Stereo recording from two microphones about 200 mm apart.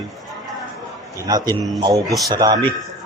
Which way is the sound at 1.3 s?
20° right (ahead or behind).